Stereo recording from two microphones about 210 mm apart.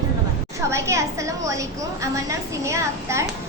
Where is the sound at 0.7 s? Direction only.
15° right (ahead or behind).